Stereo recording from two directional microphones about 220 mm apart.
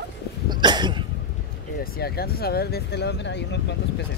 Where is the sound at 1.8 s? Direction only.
45° left (ahead or behind).